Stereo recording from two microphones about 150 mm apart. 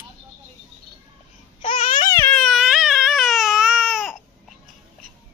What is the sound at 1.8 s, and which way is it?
Babbling, 60° left (ahead or behind).